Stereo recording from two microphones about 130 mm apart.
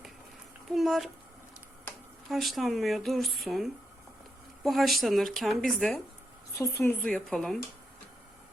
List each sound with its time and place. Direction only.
0.7 s speech: centre (ahead or behind)
2.3 s speech: centre (ahead or behind)
6.6 s a woman's voice: 20° left (ahead or behind)
7.0 s speech: 5° left (ahead or behind)